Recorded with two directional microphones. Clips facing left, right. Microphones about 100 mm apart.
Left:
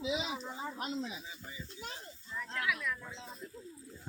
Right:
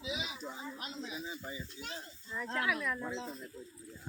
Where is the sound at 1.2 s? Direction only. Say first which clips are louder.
Right 5 dB; 30° right (ahead or behind).